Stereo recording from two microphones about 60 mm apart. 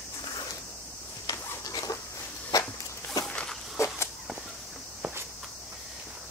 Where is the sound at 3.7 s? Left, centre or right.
Left.